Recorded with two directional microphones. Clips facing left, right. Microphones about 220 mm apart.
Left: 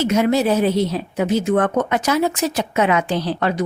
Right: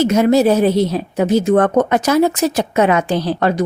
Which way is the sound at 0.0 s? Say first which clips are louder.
Right 5 dB; 40° right (ahead or behind).